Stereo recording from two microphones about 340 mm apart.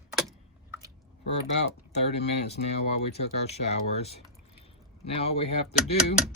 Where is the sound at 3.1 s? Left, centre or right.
Centre.